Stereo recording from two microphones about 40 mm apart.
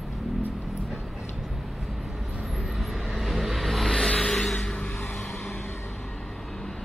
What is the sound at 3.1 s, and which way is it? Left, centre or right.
Vehicle, centre.